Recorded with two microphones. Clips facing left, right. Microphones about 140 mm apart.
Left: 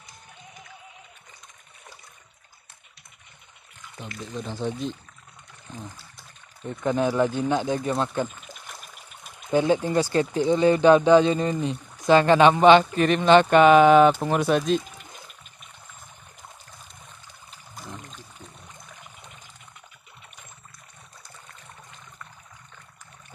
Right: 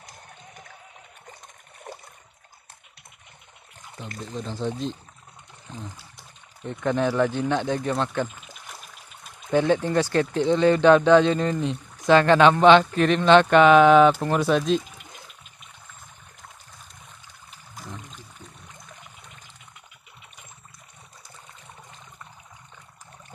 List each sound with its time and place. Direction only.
1.9 s water: 60° right (ahead or behind)
4.4 s speech: 5° left (ahead or behind)
6.6 s speech: 10° left (ahead or behind)
17.7 s music: centre (ahead or behind)